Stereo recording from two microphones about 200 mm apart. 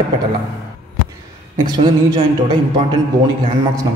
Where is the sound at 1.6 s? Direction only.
20° right (ahead or behind).